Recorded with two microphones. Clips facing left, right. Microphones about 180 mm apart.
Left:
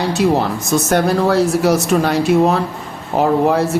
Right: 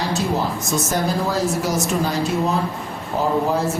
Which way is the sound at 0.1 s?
65° left (ahead or behind).